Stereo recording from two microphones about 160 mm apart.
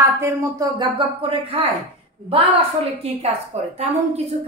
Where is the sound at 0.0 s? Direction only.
20° right (ahead or behind).